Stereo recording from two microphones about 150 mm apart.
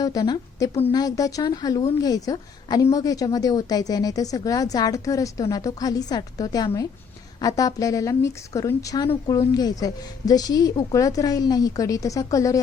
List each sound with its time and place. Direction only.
0.0 s a woman's voice: 25° left (ahead or behind)